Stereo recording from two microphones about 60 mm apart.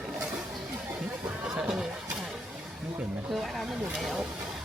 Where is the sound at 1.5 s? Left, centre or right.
Centre.